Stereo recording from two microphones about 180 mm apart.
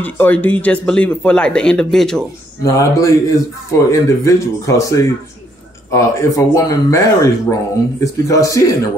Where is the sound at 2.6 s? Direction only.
20° left (ahead or behind).